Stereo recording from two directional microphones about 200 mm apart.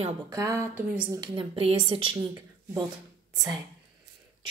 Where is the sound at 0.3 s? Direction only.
15° right (ahead or behind).